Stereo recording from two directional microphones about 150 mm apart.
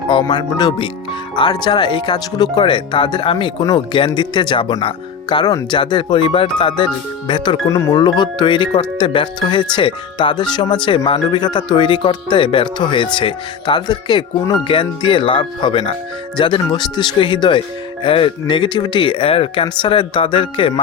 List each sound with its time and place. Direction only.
0.1 s speech: 30° left (ahead or behind)